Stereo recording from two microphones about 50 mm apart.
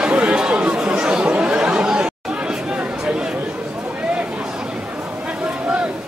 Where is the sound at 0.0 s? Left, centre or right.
Right.